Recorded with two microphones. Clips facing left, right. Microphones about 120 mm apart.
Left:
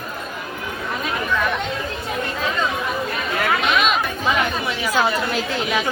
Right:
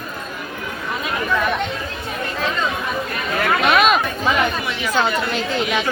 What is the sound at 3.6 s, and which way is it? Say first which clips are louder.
Chatter: right 7 dB; 50° right (ahead or behind).